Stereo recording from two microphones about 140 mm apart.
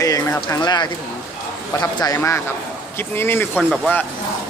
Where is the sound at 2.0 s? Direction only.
25° left (ahead or behind).